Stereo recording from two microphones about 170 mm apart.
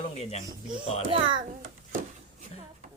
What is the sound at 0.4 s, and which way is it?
Speech, 25° right (ahead or behind).